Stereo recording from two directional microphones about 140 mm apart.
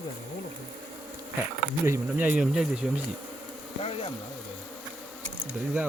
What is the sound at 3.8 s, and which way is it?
Speech, 45° left (ahead or behind).